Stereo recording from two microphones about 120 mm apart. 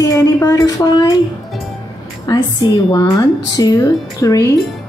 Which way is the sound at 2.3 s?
40° left (ahead or behind).